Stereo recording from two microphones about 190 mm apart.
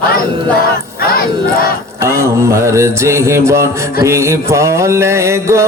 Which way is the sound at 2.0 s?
15° right (ahead or behind).